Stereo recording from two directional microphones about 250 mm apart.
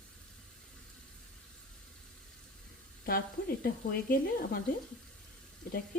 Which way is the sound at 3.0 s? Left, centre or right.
Left.